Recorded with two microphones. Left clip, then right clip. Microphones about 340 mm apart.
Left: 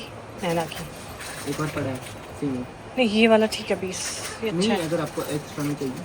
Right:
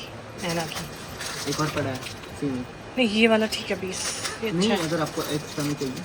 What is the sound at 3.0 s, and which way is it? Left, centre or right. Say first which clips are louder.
Speech: left 2 dB; centre.